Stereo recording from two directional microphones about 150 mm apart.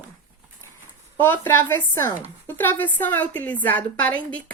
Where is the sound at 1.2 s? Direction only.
15° left (ahead or behind).